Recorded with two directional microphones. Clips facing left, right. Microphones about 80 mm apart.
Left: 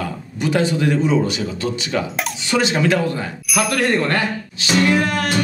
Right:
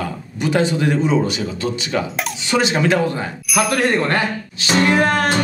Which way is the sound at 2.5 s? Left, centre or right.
Right.